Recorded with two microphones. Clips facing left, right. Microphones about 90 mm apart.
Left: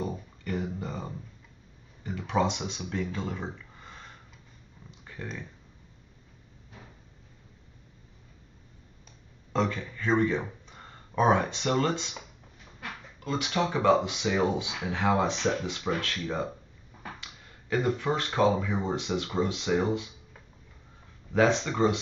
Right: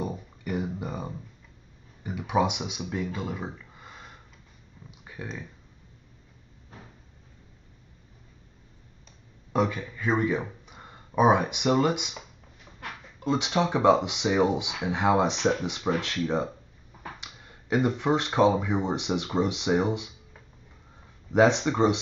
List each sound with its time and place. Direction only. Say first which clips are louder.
0.0 s a sound: right 1 dB; 15° right (ahead or behind)
2.0 s speech: right 2 dB; 15° right (ahead or behind)
4.9 s a sound: right 1 dB; 10° right (ahead or behind)
6.7 s cupboard open or close: right 2 dB; 40° right (ahead or behind)
9.5 s speech: right 2 dB; 10° right (ahead or behind)
13.2 s speech: right 3 dB; 20° right (ahead or behind)
21.3 s speech: right 3 dB; 20° right (ahead or behind)